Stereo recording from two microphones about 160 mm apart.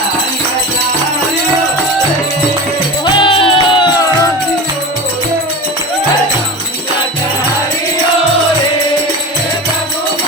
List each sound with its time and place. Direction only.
3.1 s music: 30° left (ahead or behind)